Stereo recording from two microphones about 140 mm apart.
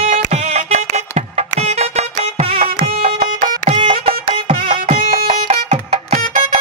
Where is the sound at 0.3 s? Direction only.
50° right (ahead or behind).